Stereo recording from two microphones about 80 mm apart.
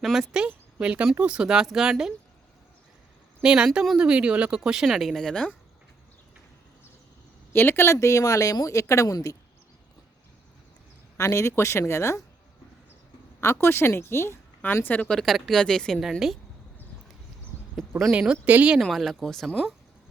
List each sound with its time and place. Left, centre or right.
0.0 s speech: centre
3.4 s speech: centre
7.5 s speech: left
11.2 s speech: left
13.4 s speech: left
14.8 s speech: centre
15.1 s speech: centre
18.1 s speech: centre
18.8 s speech: centre